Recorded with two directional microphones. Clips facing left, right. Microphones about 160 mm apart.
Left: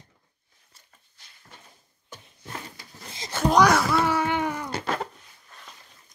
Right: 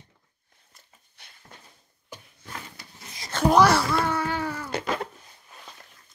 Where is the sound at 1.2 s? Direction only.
65° right (ahead or behind).